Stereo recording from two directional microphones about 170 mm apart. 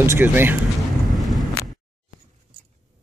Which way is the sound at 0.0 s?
10° right (ahead or behind).